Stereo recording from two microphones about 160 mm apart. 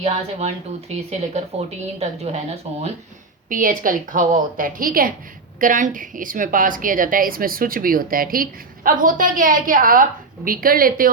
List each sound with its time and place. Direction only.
0.0 s speech: 40° right (ahead or behind)
3.5 s a woman's voice: 60° right (ahead or behind)